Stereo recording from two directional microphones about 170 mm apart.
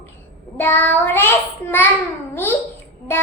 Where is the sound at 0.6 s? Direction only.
10° left (ahead or behind).